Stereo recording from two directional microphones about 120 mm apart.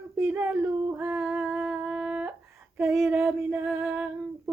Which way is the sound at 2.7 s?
20° right (ahead or behind).